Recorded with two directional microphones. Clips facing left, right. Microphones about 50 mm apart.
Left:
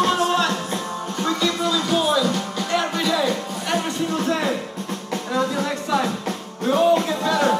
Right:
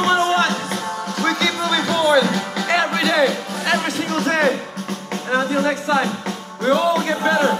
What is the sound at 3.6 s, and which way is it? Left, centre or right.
Music, right.